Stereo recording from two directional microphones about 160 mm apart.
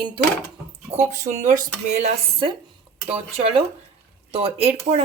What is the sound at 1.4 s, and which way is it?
Speech, 45° right (ahead or behind).